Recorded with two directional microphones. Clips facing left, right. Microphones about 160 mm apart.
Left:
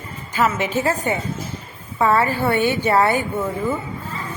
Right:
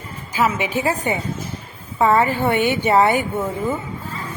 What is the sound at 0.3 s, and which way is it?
A woman's voice, 10° right (ahead or behind).